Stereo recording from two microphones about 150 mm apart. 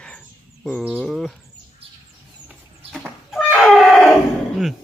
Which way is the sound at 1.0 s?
5° left (ahead or behind).